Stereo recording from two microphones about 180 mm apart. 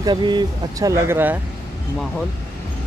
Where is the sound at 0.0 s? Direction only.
25° right (ahead or behind).